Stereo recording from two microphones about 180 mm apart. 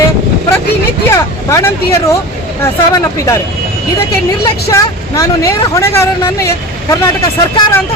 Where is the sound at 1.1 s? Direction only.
15° left (ahead or behind).